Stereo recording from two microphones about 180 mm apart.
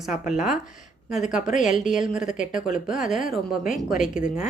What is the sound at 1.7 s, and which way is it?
Speech, centre (ahead or behind).